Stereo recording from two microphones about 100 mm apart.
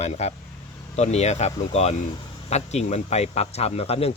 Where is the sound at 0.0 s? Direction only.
90° left.